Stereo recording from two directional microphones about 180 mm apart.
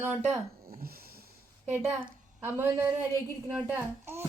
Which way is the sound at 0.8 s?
55° right (ahead or behind).